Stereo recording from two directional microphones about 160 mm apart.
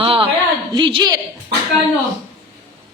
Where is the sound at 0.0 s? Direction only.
35° right (ahead or behind).